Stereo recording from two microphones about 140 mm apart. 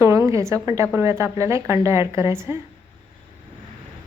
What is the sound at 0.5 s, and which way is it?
A woman's voice, 20° right (ahead or behind).